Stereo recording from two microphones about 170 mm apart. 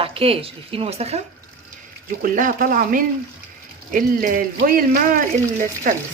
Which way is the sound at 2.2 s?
55° right (ahead or behind).